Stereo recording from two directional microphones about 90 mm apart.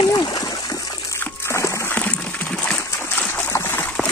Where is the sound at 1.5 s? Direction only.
35° left (ahead or behind).